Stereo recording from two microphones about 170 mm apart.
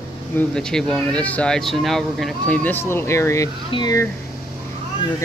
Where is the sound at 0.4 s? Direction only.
5° left (ahead or behind); by 4.1 s 20° left (ahead or behind).